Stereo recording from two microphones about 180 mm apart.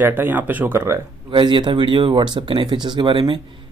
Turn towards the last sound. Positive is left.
turn(degrees=-25)  # may be behind; listen again after turning